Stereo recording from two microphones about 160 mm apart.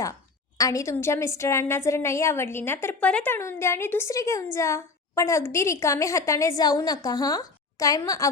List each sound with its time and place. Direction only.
0.6 s a woman's voice: 20° left (ahead or behind)